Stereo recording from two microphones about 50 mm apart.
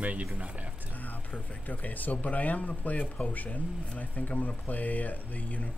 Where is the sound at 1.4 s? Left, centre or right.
Left.